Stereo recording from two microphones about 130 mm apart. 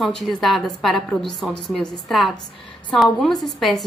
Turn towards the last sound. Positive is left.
turn(degrees=0)  # may be behind; listen again after turning